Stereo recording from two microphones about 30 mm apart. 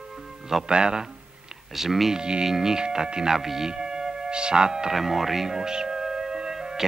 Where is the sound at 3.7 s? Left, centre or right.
Right.